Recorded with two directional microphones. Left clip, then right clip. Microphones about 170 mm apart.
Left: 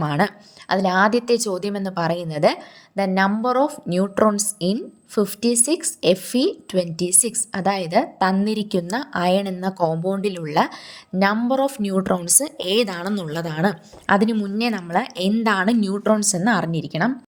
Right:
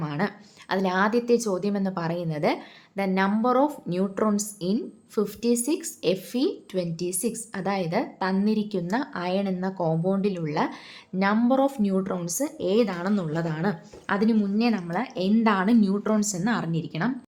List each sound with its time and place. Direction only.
0.0 s a woman's voice: 45° left (ahead or behind)
0.7 s a woman's voice: 30° left (ahead or behind)